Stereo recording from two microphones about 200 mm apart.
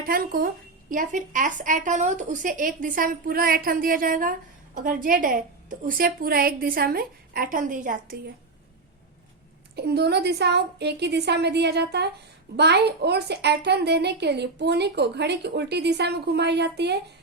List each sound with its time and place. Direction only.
0.0 s a woman's voice: 45° right (ahead or behind)
9.7 s a child's voice: 55° right (ahead or behind)